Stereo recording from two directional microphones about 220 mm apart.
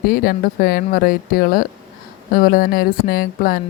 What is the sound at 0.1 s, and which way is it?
Speech, 40° left (ahead or behind).